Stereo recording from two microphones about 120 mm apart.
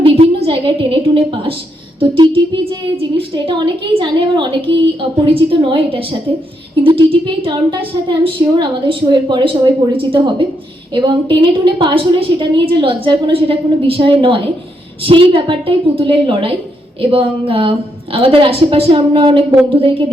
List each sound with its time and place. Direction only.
0.0 s a woman's voice: 50° right (ahead or behind)